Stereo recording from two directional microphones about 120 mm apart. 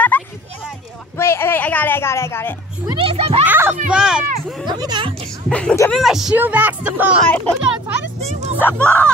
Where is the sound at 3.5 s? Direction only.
20° right (ahead or behind).